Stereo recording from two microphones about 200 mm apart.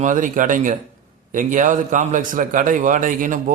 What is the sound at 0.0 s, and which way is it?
A man's voice, 40° right (ahead or behind).